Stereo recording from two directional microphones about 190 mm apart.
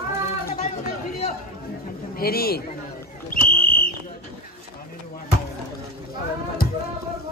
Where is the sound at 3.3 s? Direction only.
50° left (ahead or behind).